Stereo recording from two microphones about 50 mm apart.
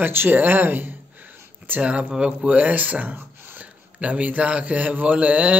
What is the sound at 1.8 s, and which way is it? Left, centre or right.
Speech, right.